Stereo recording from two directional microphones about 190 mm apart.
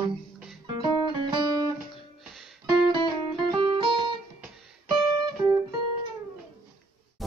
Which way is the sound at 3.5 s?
25° right (ahead or behind).